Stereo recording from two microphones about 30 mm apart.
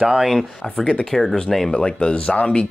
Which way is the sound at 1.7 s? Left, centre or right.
Left.